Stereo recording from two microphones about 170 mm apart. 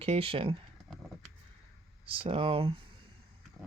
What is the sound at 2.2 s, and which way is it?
Speech, 35° right (ahead or behind).